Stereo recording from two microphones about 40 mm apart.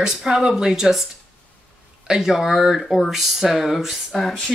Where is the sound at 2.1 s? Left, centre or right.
Centre.